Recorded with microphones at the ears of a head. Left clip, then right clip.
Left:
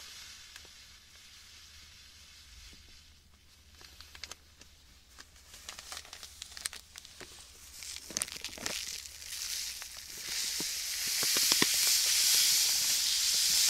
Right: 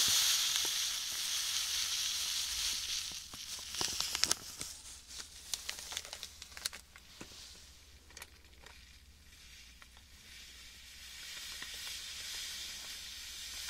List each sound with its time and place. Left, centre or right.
0.0 s sizzle: right
3.7 s a sound: right
7.8 s crumpling: left